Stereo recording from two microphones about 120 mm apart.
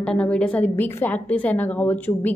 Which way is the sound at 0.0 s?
10° left (ahead or behind).